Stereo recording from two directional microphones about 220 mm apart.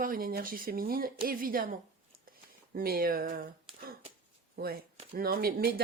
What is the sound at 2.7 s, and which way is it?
Speech, 40° right (ahead or behind).